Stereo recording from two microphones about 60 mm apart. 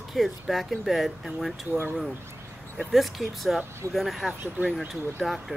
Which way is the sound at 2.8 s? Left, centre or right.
Centre.